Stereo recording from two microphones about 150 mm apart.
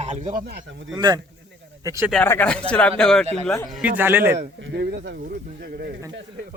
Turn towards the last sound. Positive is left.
turn(degrees=-90)